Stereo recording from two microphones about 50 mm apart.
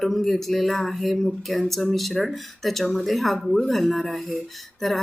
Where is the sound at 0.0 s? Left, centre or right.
Centre.